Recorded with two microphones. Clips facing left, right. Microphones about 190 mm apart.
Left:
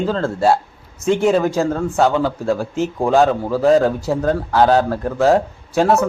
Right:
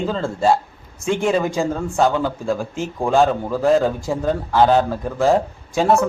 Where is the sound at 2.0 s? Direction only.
Centre (ahead or behind).